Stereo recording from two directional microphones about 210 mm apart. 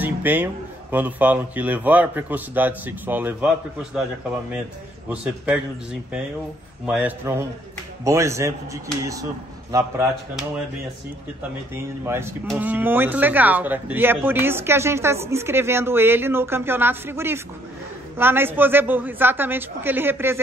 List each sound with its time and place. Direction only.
0.0 s a sound: 10° right (ahead or behind)
0.9 s speech: 10° right (ahead or behind)
5.1 s a man's voice: 5° right (ahead or behind)
6.9 s speech: 5° right (ahead or behind)
11.7 s speech: 10° right (ahead or behind)